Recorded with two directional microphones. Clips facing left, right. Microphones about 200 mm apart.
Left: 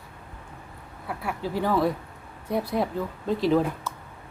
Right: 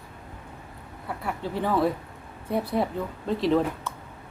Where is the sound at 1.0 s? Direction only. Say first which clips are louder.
Left 1 dB; 5° left (ahead or behind).